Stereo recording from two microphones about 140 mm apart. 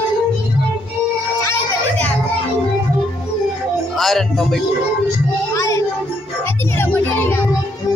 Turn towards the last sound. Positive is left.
turn(degrees=15)  # may be behind; listen again after turning